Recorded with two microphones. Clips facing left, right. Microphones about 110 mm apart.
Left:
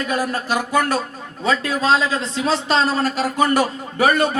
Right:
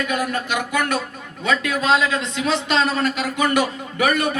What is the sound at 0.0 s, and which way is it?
A man's voice, 35° left (ahead or behind).